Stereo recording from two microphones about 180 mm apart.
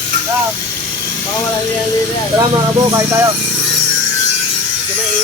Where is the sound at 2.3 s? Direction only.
20° right (ahead or behind).